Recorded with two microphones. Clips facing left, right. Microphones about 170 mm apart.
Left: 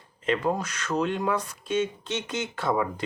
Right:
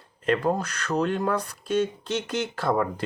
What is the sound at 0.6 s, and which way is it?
Speech, 60° right (ahead or behind).